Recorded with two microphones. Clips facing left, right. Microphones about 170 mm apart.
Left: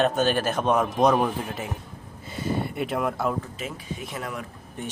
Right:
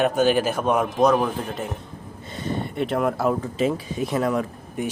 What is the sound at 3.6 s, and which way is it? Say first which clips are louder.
Speech: right 11 dB; 35° right (ahead or behind).